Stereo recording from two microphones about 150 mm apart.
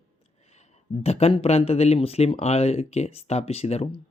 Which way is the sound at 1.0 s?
45° left (ahead or behind).